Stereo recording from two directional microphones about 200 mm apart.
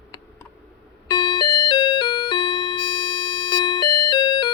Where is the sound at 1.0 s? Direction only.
20° left (ahead or behind).